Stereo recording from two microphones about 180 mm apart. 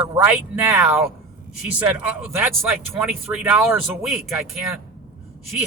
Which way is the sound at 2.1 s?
15° right (ahead or behind).